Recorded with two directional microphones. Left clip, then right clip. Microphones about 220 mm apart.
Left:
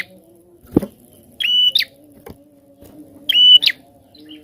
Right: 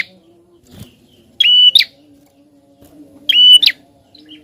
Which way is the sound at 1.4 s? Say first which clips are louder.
Right 7 dB; 15° left (ahead or behind).